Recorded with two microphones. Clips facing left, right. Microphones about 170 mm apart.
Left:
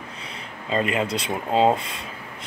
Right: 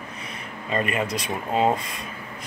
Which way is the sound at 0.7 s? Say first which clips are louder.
Left 2 dB; 25° left (ahead or behind).